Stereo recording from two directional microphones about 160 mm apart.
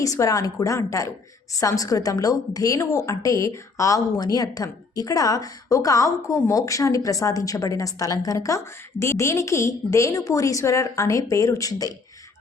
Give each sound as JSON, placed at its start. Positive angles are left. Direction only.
{"t": 0.0, "sound": "a woman's voice", "side_deg": 20}